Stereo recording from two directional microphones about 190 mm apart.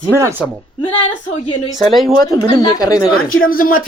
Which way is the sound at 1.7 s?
Centre (ahead or behind).